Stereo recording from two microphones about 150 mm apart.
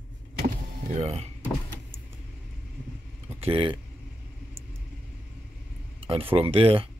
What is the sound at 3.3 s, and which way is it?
Speech, 40° right (ahead or behind).